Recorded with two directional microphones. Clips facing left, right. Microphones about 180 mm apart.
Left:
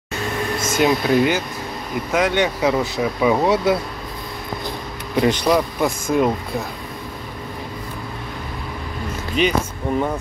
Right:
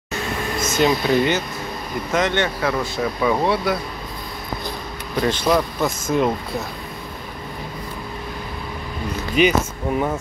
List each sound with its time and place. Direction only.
0.6 s speech: 5° left (ahead or behind)
5.2 s speech: 15° left (ahead or behind)
9.4 s speech: 5° right (ahead or behind)